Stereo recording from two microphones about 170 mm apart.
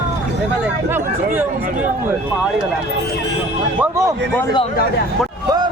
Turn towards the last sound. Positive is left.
turn(degrees=-15)  # may be behind; listen again after turning